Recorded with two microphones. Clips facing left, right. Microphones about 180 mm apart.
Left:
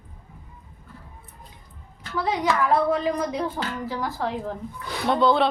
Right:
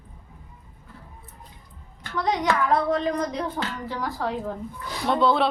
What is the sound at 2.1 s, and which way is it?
Speech, 5° left (ahead or behind).